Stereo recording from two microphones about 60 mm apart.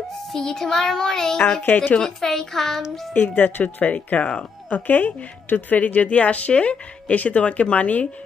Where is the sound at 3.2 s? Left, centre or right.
Left.